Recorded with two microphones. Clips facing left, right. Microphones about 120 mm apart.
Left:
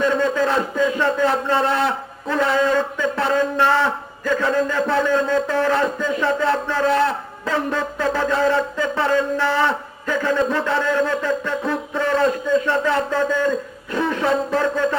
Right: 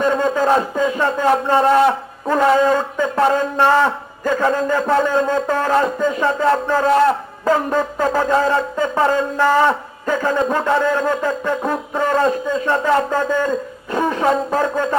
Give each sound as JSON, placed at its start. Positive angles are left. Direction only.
{"t": 0.0, "sound": "a man's voice", "side_deg": -40}